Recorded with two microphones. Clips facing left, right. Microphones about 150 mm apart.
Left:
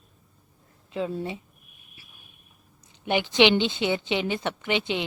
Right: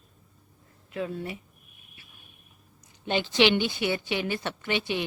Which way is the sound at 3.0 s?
15° left (ahead or behind).